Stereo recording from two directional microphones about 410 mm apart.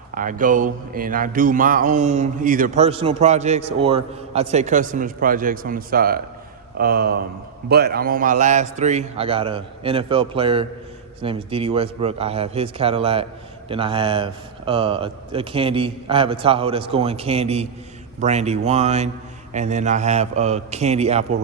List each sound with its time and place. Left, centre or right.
0.1 s a man's voice: centre